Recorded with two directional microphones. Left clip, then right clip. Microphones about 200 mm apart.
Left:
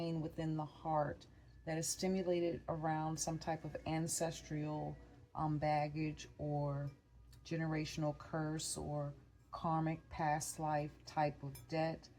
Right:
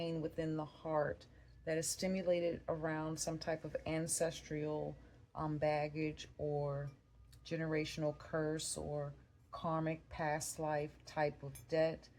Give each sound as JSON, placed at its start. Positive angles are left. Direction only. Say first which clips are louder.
{"t": 0.0, "sound": "speech", "louder": "right 2 dB", "side_deg": -35}